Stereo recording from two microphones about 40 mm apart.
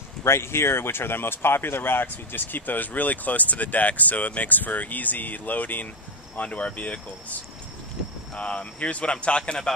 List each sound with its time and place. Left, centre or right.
0.2 s speech: left
6.3 s speech: left
8.4 s speech: left